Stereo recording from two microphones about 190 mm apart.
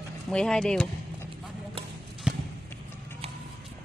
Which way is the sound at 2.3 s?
5° right (ahead or behind).